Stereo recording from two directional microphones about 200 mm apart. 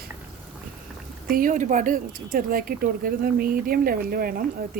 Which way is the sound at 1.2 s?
45° right (ahead or behind).